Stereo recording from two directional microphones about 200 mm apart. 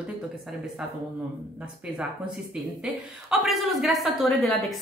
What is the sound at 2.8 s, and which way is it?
Speech, centre (ahead or behind).